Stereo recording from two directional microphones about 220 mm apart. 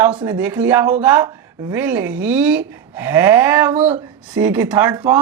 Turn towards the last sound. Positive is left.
turn(degrees=-10)  # may be behind; listen again after turning